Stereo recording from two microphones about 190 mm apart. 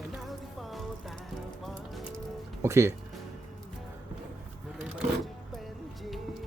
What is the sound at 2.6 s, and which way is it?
Speech, 15° right (ahead or behind).